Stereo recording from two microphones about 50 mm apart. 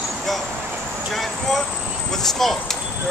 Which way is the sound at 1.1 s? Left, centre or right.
Centre.